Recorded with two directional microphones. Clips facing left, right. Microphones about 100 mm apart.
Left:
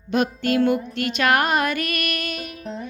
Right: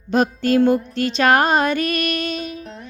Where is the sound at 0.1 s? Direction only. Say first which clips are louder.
Right 4 dB; 35° right (ahead or behind).